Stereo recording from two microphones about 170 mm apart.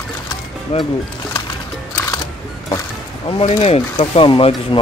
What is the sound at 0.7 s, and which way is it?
Speech, 35° left (ahead or behind).